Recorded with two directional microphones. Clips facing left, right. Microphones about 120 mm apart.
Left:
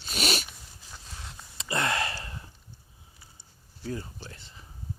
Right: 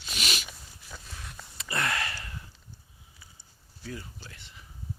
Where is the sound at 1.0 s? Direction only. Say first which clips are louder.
Even; 25° left (ahead or behind).